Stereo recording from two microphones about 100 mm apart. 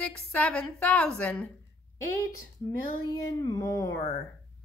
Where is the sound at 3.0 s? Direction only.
45° left (ahead or behind).